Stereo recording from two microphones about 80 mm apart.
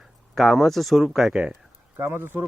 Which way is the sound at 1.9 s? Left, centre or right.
Right.